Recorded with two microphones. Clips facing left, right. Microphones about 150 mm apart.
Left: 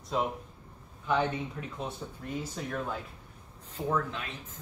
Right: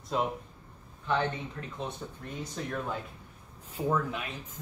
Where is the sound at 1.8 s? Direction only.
5° left (ahead or behind).